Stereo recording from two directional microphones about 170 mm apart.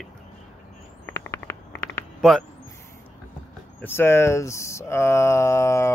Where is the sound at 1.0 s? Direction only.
15° left (ahead or behind).